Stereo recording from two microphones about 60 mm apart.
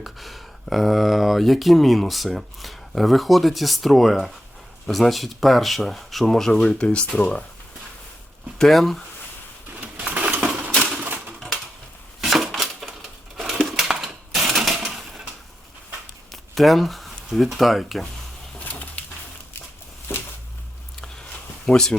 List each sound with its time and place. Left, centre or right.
0.0 s speech: centre
6.6 s speech: centre
8.5 s speech: centre
9.8 s a sound: centre
10.3 s coin: right
12.2 s a sound: centre
12.8 s typewriter: centre
13.3 s a sound: centre
13.7 s typewriter: centre
16.3 s speech: centre
18.6 s bird: left
20.1 s a sound: left
21.7 s speech: centre